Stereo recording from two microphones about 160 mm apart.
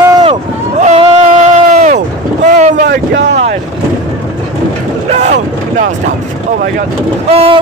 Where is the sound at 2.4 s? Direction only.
50° right (ahead or behind).